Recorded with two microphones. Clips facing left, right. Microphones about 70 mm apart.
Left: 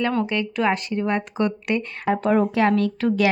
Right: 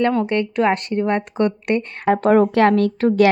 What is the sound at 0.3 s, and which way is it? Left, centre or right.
Speech, right.